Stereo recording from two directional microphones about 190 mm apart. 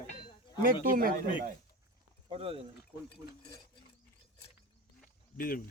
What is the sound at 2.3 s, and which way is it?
Speech, 30° right (ahead or behind).